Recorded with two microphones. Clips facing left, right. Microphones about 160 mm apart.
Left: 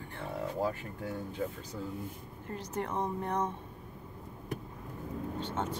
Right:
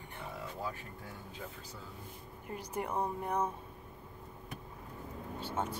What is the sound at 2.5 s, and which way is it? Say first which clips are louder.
Speech: left 2 dB; 10° right (ahead or behind).